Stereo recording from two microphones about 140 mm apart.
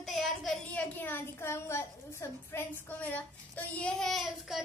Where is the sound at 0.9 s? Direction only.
15° left (ahead or behind).